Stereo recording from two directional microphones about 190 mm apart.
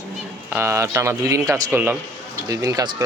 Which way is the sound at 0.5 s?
15° right (ahead or behind).